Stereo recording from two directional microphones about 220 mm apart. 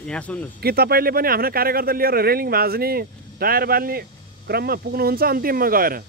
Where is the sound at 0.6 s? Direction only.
45° right (ahead or behind).